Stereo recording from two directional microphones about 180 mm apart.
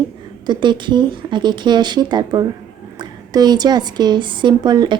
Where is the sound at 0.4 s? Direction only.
25° right (ahead or behind).